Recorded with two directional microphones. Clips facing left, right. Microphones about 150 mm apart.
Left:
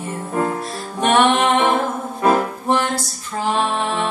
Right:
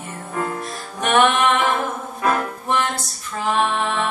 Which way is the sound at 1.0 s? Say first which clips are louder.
Left 2 dB; 30° left (ahead or behind).